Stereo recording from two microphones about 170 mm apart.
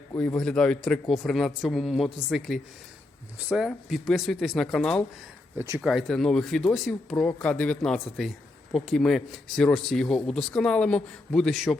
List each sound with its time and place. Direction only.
0.2 s speech: 5° left (ahead or behind)
5.5 s speech: 15° right (ahead or behind)
5.8 s speech: centre (ahead or behind)